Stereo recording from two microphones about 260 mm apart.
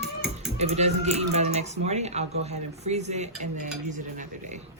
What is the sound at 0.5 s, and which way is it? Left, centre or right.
Speech, right.